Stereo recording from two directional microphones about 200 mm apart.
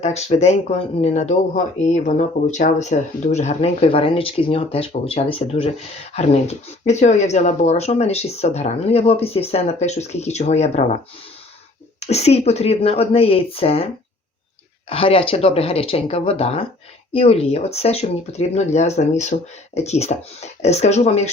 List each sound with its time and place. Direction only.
0.0 s speech: 35° left (ahead or behind)
11.9 s a woman's voice: 30° left (ahead or behind)
14.8 s a woman's voice: 30° left (ahead or behind)